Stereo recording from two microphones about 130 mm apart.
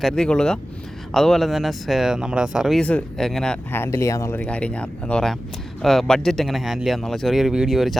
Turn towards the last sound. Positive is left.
turn(degrees=0)  # may be behind; listen again after turning